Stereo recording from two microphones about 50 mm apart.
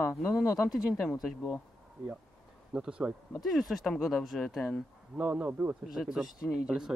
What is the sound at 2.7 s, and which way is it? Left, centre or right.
Speech, centre.